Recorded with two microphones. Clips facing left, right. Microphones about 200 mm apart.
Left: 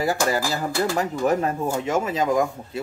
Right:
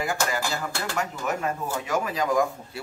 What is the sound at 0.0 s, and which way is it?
Speech, 40° left (ahead or behind).